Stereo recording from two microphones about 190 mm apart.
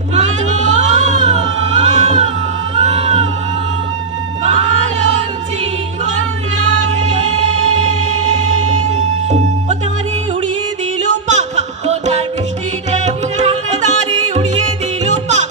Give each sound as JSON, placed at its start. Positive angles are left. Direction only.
{"t": 0.1, "sound": "music", "side_deg": -40}
{"t": 7.0, "sound": "music", "side_deg": -35}
{"t": 8.9, "sound": "music", "side_deg": -40}
{"t": 11.2, "sound": "a sound", "side_deg": -35}
{"t": 12.9, "sound": "music", "side_deg": -35}
{"t": 15.0, "sound": "music", "side_deg": -40}